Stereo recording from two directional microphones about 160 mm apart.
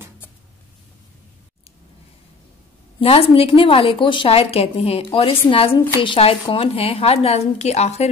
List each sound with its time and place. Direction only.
3.0 s a woman's voice: 35° left (ahead or behind)